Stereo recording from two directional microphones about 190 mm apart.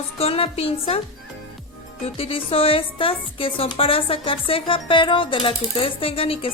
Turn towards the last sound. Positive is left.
turn(degrees=30)  # may be behind; listen again after turning